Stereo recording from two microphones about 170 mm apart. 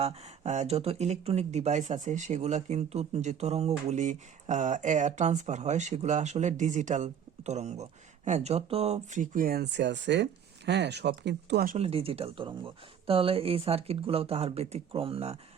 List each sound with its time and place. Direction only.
0.0 s speech: 40° right (ahead or behind); by 11.7 s 75° right (ahead or behind)
11.7 s speech: 35° right (ahead or behind)